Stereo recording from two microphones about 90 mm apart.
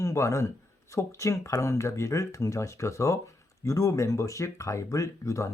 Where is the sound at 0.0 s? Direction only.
35° left (ahead or behind).